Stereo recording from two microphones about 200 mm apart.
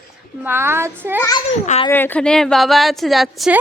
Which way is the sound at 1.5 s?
35° left (ahead or behind).